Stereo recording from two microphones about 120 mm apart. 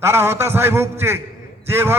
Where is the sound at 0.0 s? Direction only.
20° right (ahead or behind).